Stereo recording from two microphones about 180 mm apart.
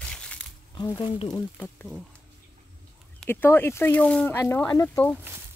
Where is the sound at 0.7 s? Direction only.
25° left (ahead or behind).